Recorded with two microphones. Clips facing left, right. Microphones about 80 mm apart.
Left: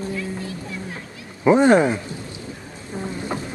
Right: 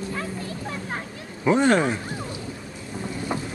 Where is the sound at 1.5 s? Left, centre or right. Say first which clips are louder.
Left 5 dB; left.